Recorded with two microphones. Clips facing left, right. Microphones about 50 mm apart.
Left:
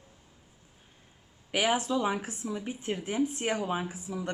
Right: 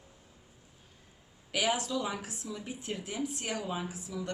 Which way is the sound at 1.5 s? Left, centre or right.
Left.